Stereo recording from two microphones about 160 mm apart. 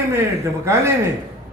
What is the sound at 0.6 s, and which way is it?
Speech, 15° right (ahead or behind).